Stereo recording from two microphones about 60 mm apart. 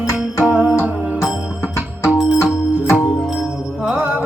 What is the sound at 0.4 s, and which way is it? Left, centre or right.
Music, right.